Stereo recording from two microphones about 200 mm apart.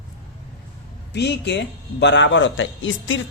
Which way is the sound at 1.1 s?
60° left (ahead or behind).